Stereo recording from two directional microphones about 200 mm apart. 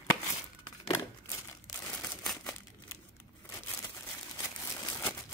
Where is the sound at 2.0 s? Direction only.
5° left (ahead or behind).